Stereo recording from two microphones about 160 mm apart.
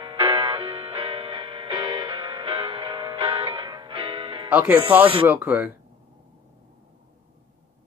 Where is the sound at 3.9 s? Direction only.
35° right (ahead or behind).